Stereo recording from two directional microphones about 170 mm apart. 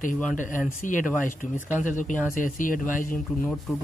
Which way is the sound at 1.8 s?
50° left (ahead or behind).